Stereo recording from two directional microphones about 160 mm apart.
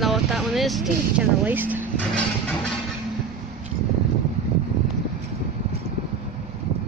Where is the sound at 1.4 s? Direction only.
10° right (ahead or behind).